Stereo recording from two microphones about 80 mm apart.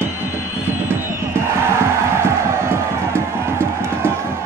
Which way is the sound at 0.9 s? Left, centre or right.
Right.